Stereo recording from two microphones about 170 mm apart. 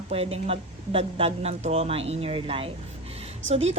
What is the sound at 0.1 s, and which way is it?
A woman's voice, 35° right (ahead or behind).